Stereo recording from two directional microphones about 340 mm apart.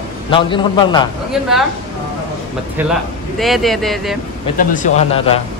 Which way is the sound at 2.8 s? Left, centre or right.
Centre.